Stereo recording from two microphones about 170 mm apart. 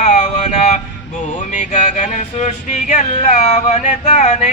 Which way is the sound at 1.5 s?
45° left (ahead or behind).